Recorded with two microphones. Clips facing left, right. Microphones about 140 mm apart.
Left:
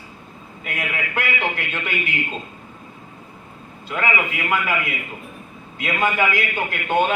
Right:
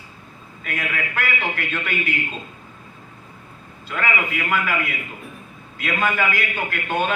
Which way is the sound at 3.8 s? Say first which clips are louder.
Left 2 dB; 25° left (ahead or behind).